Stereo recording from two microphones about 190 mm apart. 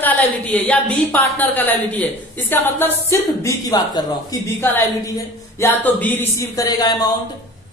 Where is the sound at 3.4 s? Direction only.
20° left (ahead or behind).